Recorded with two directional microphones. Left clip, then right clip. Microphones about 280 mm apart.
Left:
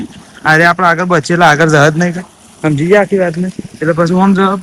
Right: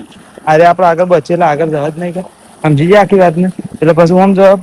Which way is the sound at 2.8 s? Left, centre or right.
Right.